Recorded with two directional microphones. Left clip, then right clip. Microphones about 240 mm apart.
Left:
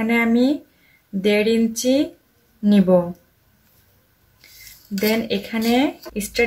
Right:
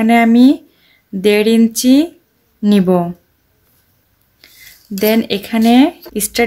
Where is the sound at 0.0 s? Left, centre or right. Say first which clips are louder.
Right 8 dB; right.